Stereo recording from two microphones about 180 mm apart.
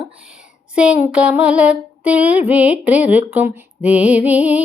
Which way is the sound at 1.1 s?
5° right (ahead or behind).